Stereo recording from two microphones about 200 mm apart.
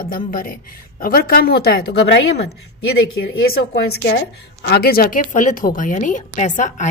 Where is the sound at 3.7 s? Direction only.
60° left (ahead or behind); by 6.8 s 40° left (ahead or behind).